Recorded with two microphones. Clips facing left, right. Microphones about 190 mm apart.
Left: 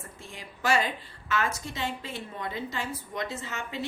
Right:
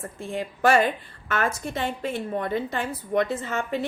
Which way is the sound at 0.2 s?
55° right (ahead or behind).